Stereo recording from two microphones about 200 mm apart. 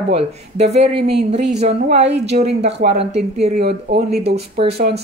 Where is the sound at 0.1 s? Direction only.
30° right (ahead or behind).